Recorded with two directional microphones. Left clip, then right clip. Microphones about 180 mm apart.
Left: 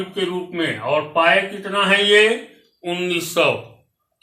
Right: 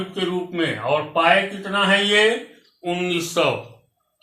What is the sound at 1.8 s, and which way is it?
Speech, 20° left (ahead or behind).